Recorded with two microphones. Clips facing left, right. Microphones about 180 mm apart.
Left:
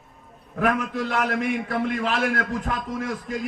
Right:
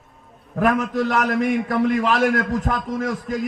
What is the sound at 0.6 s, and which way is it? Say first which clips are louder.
A man's voice: right 4 dB; 40° right (ahead or behind).